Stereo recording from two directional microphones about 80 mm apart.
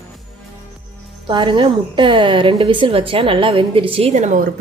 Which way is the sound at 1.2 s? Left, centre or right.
Right.